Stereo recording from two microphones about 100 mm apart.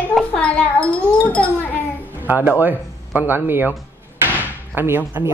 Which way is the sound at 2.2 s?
15° right (ahead or behind).